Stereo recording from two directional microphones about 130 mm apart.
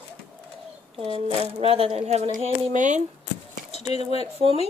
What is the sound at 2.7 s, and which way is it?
Speech, 70° right (ahead or behind).